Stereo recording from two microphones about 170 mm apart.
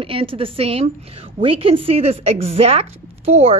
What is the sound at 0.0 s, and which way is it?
A woman's voice, 35° right (ahead or behind).